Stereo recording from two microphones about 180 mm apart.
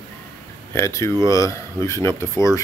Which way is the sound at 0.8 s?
15° left (ahead or behind).